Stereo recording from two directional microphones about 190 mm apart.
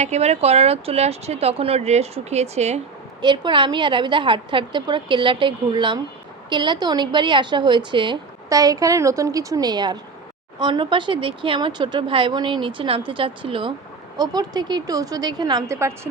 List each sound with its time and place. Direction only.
0.0 s speech: 35° right (ahead or behind)
3.2 s a woman's voice: 25° right (ahead or behind)